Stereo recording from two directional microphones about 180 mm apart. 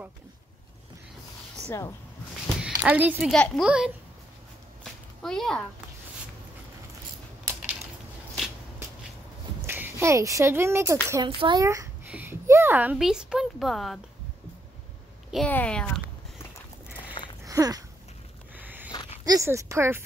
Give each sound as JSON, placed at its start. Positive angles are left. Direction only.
{"t": 1.6, "sound": "speech", "side_deg": 15}
{"t": 2.8, "sound": "speech", "side_deg": -10}
{"t": 5.2, "sound": "speech", "side_deg": 5}
{"t": 9.7, "sound": "speech", "side_deg": -15}
{"t": 11.2, "sound": "a child's voice", "side_deg": -25}
{"t": 15.3, "sound": "speech", "side_deg": 5}
{"t": 17.2, "sound": "a sound", "side_deg": 25}
{"t": 17.5, "sound": "a sound", "side_deg": -20}
{"t": 18.9, "sound": "a sound", "side_deg": 25}
{"t": 19.2, "sound": "a child's voice", "side_deg": -15}